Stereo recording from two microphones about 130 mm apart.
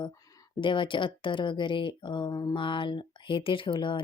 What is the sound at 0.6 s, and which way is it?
Speech, 40° left (ahead or behind).